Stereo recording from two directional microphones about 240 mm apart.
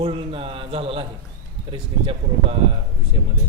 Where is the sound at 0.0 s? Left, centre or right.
Right.